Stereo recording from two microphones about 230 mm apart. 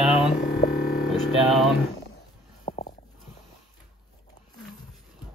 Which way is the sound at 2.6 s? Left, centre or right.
Left.